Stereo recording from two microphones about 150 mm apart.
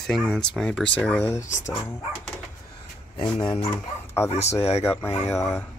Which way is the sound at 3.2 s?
20° left (ahead or behind).